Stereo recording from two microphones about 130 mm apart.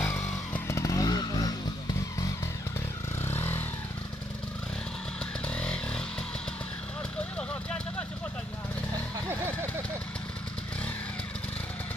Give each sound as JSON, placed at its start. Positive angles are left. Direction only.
{"t": 0.0, "sound": "vehicle", "side_deg": 20}
{"t": 3.3, "sound": "vehicle", "side_deg": 15}
{"t": 5.5, "sound": "motorcycle", "side_deg": 10}